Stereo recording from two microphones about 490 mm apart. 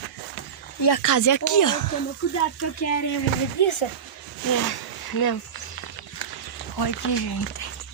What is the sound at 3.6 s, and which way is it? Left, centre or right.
Speech, left.